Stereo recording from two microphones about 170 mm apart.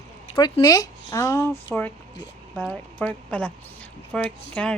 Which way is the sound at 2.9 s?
10° left (ahead or behind).